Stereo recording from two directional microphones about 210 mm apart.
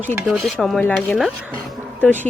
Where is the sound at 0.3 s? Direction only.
Centre (ahead or behind).